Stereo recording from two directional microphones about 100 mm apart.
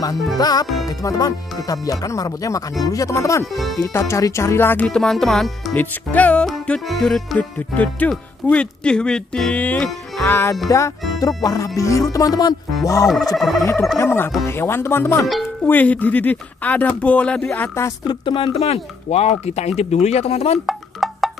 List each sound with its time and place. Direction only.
0.4 s music: 40° left (ahead or behind)
3.7 s speech: 30° left (ahead or behind)
4.8 s music: 5° left (ahead or behind)
5.8 s speech: 15° left (ahead or behind)
6.9 s music: 5° left (ahead or behind)
7.3 s speech: 15° left (ahead or behind)
11.1 s music: 40° left (ahead or behind)
13.4 s music: centre (ahead or behind)
13.9 s speech: 25° left (ahead or behind)
18.0 s speech: 55° left (ahead or behind)
18.5 s speech: 90° left
20.6 s music: centre (ahead or behind)